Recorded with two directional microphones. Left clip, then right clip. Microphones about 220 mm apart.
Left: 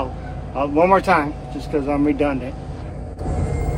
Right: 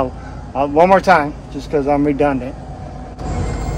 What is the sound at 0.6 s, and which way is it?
Speech, 45° right (ahead or behind).